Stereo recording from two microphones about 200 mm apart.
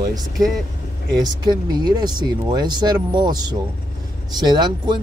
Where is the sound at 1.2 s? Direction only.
20° right (ahead or behind).